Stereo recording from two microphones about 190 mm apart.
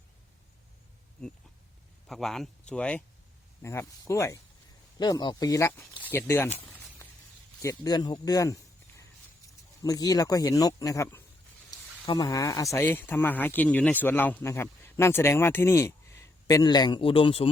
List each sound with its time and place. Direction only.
1.2 s speech: 5° left (ahead or behind)
6.7 s a sound: 5° left (ahead or behind)
7.6 s speech: 20° left (ahead or behind)
9.8 s speech: 20° left (ahead or behind)